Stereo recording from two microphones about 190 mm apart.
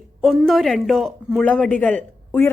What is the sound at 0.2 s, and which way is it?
A woman's voice, centre (ahead or behind).